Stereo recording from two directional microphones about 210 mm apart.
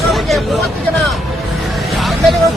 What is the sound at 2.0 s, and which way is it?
Music, centre (ahead or behind).